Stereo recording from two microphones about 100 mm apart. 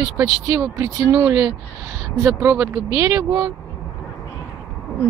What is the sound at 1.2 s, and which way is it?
Speech, 25° right (ahead or behind).